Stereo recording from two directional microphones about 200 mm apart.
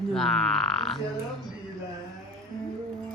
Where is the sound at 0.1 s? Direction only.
Centre (ahead or behind).